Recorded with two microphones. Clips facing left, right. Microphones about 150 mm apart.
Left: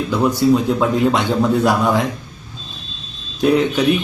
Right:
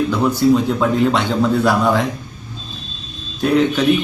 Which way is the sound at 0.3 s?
10° left (ahead or behind).